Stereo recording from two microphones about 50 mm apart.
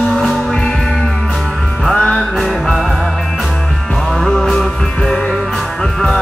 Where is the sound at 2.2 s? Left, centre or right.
Centre.